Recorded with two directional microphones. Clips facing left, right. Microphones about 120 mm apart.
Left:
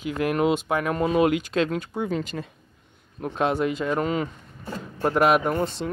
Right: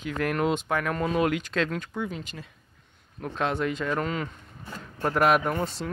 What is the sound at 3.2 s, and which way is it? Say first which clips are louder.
Speech: left 4 dB; 15° left (ahead or behind).